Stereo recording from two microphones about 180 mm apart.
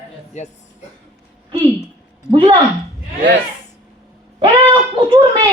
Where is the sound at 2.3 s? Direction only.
25° right (ahead or behind).